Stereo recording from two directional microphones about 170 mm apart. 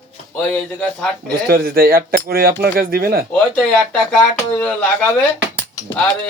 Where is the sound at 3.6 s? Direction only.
Centre (ahead or behind).